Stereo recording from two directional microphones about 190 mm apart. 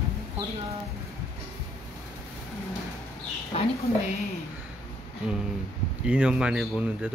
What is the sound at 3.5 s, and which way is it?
Speech, 30° left (ahead or behind).